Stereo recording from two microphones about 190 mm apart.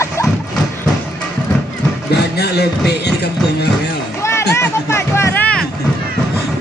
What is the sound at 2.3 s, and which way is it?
Speech, 60° left (ahead or behind).